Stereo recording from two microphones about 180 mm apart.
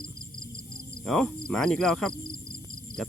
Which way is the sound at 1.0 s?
5° left (ahead or behind).